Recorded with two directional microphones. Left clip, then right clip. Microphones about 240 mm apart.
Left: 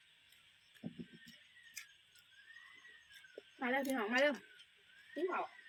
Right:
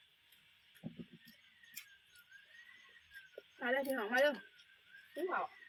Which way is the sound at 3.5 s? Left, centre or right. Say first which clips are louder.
Right 1 dB; centre.